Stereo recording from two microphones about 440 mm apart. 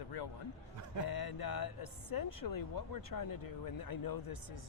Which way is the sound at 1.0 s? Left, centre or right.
Left.